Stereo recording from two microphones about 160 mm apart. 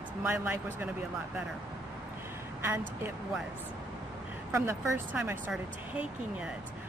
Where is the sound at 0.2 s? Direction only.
15° right (ahead or behind).